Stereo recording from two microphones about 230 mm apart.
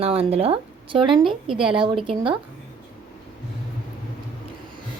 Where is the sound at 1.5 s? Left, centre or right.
Centre.